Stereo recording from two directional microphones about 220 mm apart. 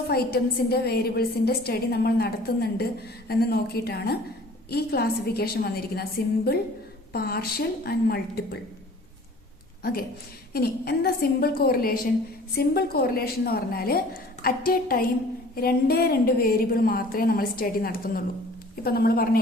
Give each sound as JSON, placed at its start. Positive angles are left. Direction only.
{"t": 0.1, "sound": "a woman's voice", "side_deg": 45}
{"t": 9.8, "sound": "a woman's voice", "side_deg": 45}